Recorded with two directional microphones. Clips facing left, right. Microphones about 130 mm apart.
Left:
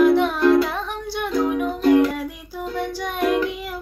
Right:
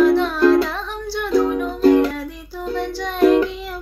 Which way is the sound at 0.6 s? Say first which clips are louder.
Even; 20° left (ahead or behind).